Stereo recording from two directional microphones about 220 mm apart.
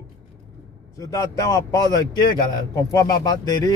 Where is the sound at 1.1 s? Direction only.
15° left (ahead or behind).